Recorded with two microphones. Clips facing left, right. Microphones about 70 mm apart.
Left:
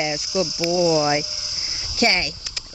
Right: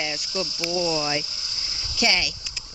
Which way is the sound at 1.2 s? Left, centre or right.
Centre.